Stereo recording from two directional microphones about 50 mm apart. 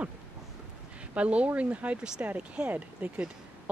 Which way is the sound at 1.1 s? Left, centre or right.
Right.